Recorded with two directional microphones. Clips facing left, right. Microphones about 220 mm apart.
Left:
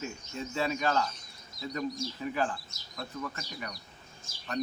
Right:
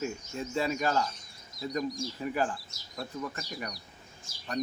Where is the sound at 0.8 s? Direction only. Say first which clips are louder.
Left 1 dB; 10° right (ahead or behind).